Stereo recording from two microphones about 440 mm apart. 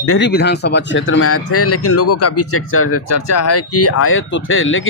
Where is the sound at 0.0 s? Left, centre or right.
Left.